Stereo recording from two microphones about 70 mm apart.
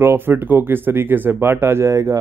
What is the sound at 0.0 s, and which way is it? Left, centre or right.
Speech, right.